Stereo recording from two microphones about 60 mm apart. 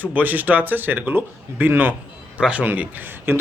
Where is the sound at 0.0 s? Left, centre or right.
Right.